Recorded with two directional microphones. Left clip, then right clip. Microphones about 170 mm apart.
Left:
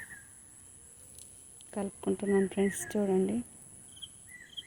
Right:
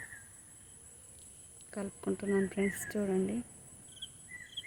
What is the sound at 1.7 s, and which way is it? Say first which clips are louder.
Speech: left 4 dB; 5° left (ahead or behind).